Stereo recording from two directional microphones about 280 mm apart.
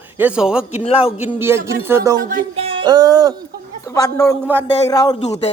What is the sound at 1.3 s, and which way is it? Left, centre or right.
Speech, centre.